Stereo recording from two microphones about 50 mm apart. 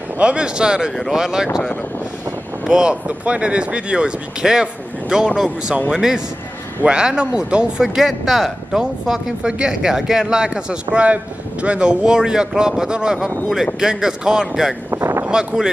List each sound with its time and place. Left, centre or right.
0.2 s speech: right
2.6 s speech: centre
14.9 s boat: right